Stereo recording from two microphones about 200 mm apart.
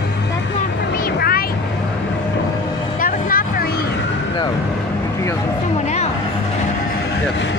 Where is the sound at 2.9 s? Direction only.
45° left (ahead or behind).